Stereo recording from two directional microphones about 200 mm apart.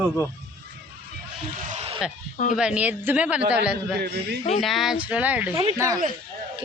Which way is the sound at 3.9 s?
55° right (ahead or behind).